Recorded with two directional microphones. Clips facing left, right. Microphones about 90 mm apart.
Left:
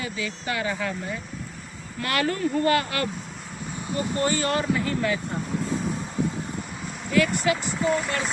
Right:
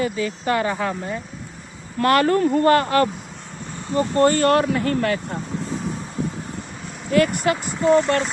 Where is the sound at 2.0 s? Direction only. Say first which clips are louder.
Right 9 dB; 40° right (ahead or behind).